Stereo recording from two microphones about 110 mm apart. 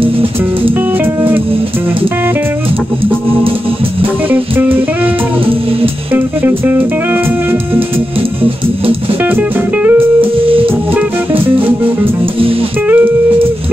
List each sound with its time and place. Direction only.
0.0 s music: 55° right (ahead or behind)
4.3 s music: 15° right (ahead or behind)
6.1 s music: 15° right (ahead or behind)
10.4 s music: 55° right (ahead or behind)
12.8 s music: 15° right (ahead or behind)